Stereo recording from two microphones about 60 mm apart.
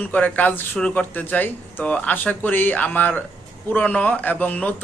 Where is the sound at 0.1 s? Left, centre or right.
Left.